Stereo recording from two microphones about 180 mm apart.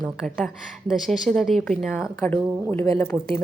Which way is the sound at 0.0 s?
Centre (ahead or behind).